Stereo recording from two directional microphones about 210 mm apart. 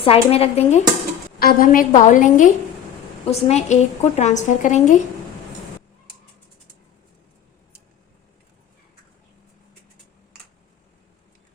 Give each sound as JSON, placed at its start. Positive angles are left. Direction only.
{"t": 0.0, "sound": "speech", "side_deg": 30}
{"t": 1.4, "sound": "a woman's voice", "side_deg": 45}